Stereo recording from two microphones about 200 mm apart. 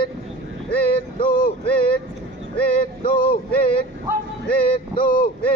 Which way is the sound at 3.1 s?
50° left (ahead or behind).